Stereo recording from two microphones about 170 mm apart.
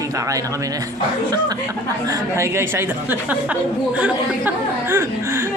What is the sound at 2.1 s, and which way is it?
Speech, 15° right (ahead or behind).